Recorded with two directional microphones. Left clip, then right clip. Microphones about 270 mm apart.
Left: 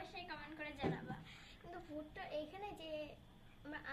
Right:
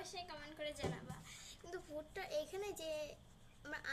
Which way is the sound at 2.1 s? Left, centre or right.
Right.